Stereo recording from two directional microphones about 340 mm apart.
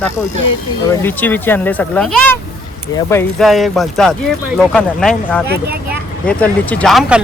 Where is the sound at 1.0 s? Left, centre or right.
Centre.